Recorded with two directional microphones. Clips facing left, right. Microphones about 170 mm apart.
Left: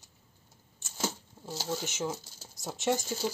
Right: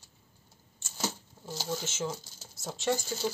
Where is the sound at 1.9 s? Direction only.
15° left (ahead or behind).